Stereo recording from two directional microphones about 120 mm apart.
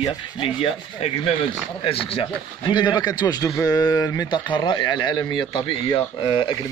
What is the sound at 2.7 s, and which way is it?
A man's voice, 35° left (ahead or behind).